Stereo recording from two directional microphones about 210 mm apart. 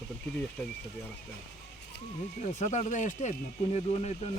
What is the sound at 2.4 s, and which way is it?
Speech, 35° left (ahead or behind).